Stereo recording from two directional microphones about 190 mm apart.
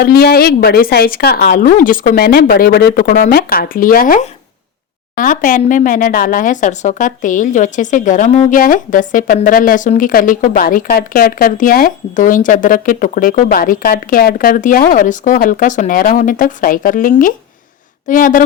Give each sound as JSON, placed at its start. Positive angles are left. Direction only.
{"t": 0.0, "sound": "speech", "side_deg": 55}